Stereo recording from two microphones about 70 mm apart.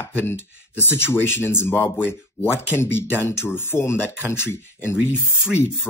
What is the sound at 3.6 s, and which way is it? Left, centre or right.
Speech, left.